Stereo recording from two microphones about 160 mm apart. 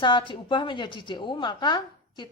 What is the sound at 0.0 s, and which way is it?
A woman's voice, 30° left (ahead or behind).